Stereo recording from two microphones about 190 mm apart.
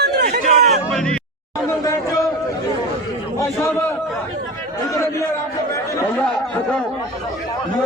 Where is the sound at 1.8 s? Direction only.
15° left (ahead or behind).